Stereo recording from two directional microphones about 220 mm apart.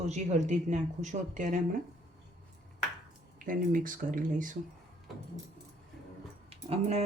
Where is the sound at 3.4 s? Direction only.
35° right (ahead or behind).